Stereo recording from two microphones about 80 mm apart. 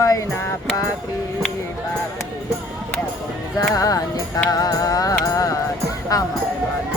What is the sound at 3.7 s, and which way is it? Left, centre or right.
Music, left.